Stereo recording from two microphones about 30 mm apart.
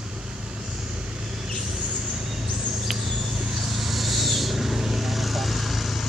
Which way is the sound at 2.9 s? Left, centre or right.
Centre.